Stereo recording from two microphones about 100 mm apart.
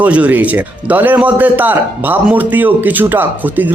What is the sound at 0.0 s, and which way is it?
Speech, 15° right (ahead or behind).